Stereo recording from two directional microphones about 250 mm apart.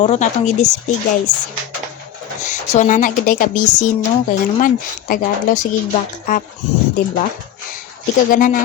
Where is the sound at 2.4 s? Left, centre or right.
Left.